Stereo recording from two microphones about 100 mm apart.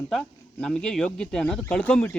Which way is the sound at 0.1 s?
5° left (ahead or behind).